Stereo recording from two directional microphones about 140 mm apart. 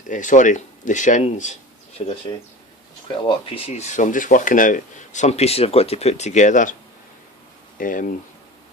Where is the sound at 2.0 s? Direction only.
40° left (ahead or behind).